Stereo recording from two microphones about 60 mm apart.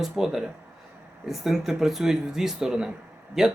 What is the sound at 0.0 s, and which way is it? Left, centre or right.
Speech, centre.